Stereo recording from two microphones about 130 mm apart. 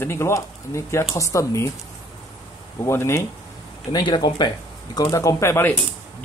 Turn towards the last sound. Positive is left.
turn(degrees=20)  # may be behind; listen again after turning